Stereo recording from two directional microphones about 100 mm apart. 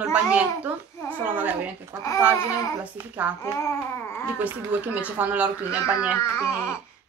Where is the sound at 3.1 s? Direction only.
15° right (ahead or behind).